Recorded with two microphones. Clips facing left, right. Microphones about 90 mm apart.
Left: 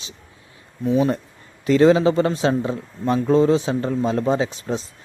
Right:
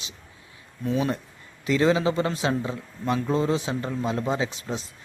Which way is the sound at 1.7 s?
30° left (ahead or behind).